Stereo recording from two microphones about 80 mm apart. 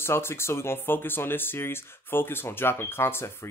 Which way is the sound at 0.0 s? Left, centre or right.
Left.